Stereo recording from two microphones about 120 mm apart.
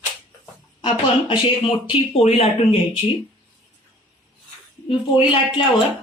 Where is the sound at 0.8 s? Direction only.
45° left (ahead or behind).